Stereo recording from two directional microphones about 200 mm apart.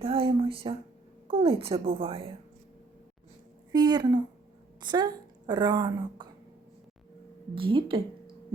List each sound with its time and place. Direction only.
0.0 s a woman's voice: 25° right (ahead or behind)
3.7 s a woman's voice: 20° right (ahead or behind)
7.5 s a woman's voice: 25° right (ahead or behind)